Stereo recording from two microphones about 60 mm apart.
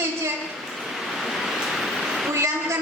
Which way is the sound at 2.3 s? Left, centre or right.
Right.